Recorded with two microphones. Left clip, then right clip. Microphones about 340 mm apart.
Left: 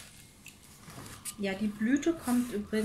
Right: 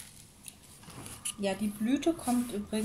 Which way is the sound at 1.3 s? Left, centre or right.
Centre.